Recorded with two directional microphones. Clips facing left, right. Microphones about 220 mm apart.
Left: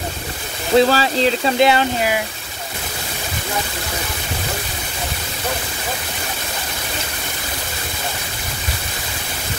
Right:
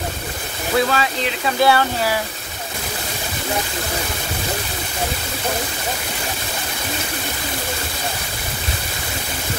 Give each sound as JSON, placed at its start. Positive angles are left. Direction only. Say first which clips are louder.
{"t": 0.7, "sound": "speech", "louder": "left 5 dB", "side_deg": 35}
{"t": 1.6, "sound": "speech", "louder": "right 1 dB", "side_deg": 20}